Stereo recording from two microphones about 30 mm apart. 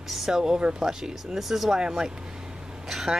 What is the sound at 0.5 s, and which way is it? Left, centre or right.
Speech, right.